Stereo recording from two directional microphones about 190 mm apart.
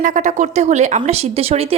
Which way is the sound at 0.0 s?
40° right (ahead or behind).